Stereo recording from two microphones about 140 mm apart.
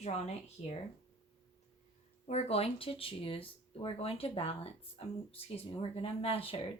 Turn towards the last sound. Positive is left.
turn(degrees=40)  # may be behind; listen again after turning